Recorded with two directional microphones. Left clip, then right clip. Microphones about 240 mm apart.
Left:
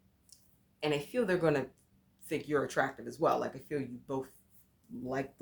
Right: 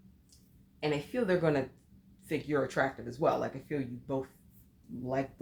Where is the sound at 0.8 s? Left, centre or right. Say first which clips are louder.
Even; left.